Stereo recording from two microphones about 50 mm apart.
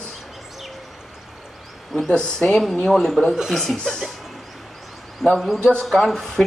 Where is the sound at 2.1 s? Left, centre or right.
Centre.